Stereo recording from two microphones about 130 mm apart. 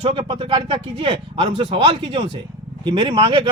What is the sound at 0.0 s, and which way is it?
A man's voice, 40° right (ahead or behind).